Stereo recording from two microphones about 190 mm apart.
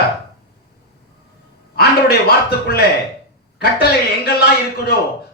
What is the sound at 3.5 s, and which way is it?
A man's voice, 60° left (ahead or behind).